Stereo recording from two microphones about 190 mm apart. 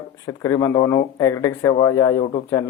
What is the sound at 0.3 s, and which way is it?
Speech, 15° left (ahead or behind).